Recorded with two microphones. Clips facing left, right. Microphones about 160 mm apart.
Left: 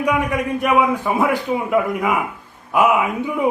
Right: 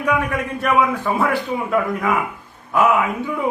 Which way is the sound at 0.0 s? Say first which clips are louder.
Left 1 dB; 15° left (ahead or behind).